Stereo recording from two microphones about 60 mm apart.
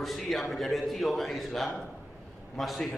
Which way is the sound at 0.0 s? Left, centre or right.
Centre.